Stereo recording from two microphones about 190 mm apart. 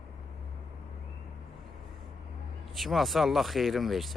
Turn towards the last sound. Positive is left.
turn(degrees=0)  # may be behind; listen again after turning